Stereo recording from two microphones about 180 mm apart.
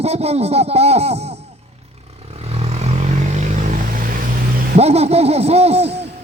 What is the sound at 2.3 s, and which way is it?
Vehicle, 35° right (ahead or behind).